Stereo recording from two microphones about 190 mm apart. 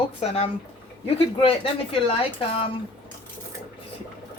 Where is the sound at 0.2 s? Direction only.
30° left (ahead or behind).